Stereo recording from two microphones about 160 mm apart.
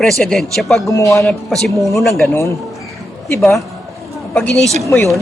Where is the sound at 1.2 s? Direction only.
5° left (ahead or behind).